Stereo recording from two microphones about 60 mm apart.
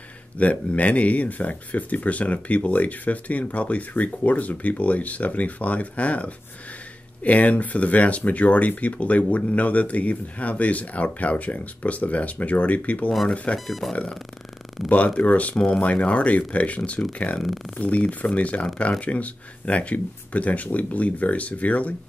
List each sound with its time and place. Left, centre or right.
0.4 s speech: left
13.7 s speech: centre
15.1 s speech: left